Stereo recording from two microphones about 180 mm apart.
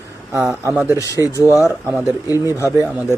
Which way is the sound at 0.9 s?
20° left (ahead or behind).